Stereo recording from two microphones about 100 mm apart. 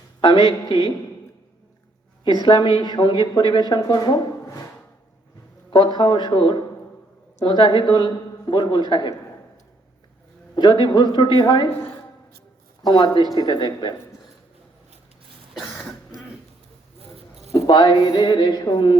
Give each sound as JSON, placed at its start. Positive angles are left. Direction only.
{"t": 0.2, "sound": "a man's voice", "side_deg": 55}
{"t": 2.2, "sound": "speech", "side_deg": 50}
{"t": 5.7, "sound": "speech", "side_deg": 50}
{"t": 10.5, "sound": "speech", "side_deg": 50}
{"t": 12.8, "sound": "speech", "side_deg": 45}
{"t": 15.5, "sound": "cough", "side_deg": 0}
{"t": 17.0, "sound": "a sound", "side_deg": -90}
{"t": 17.7, "sound": "speech", "side_deg": 50}